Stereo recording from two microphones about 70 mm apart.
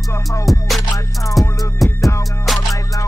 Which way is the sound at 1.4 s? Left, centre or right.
Left.